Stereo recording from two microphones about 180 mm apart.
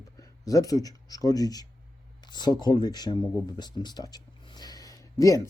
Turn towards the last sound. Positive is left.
turn(degrees=20)  # may be behind; listen again after turning